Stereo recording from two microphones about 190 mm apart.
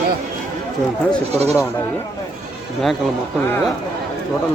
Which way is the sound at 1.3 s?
35° right (ahead or behind).